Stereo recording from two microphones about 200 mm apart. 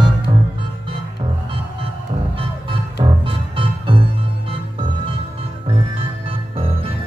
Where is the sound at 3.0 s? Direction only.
25° right (ahead or behind).